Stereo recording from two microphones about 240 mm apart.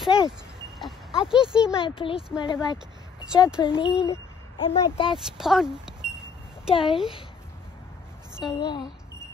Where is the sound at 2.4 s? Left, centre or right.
Centre.